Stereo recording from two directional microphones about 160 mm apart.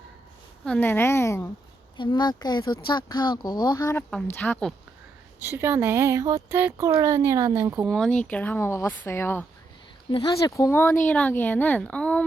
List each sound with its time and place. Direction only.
0.6 s speech: 10° left (ahead or behind)
2.0 s speech: 25° left (ahead or behind)
4.4 s speech: 10° left (ahead or behind)
5.4 s speech: 15° right (ahead or behind)
7.9 s speech: centre (ahead or behind)
10.1 s speech: 30° left (ahead or behind); by 12.2 s 5° left (ahead or behind)